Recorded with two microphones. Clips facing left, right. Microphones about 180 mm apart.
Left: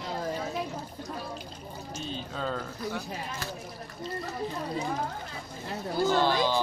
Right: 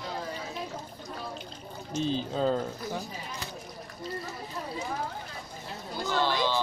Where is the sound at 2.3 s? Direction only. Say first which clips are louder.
Right 6 dB; 30° right (ahead or behind).